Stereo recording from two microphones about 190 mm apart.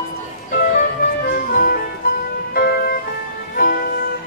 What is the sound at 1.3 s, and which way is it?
Music, 50° left (ahead or behind).